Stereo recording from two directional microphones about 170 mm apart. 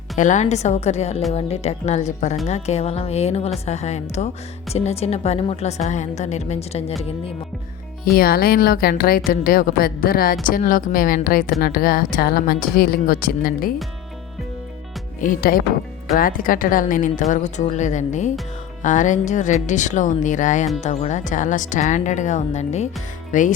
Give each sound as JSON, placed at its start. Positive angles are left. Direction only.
{"t": 0.2, "sound": "a woman's voice", "side_deg": 45}
{"t": 8.0, "sound": "speech", "side_deg": 60}
{"t": 15.2, "sound": "a woman's voice", "side_deg": 55}